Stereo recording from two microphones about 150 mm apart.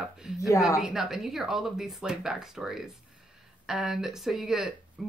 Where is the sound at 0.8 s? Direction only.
5° right (ahead or behind).